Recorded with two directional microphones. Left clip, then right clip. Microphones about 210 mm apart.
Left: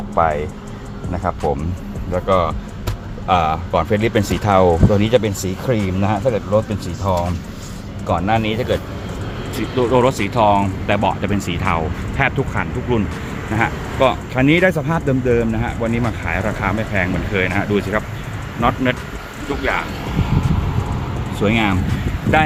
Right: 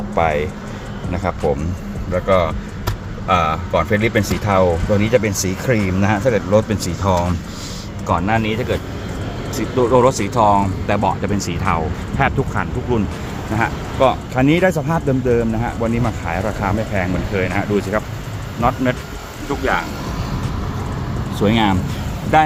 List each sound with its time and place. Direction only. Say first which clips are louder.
0.2 s speech: even; 10° right (ahead or behind); by 5.2 s 15° left (ahead or behind)
5.2 s speech: right 1 dB; 5° right (ahead or behind)
8.0 s speech: even; centre (ahead or behind)
21.5 s speech: right 1 dB; 5° right (ahead or behind)